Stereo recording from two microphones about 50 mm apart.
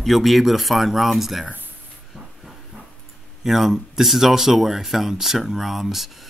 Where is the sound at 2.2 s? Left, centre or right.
Centre.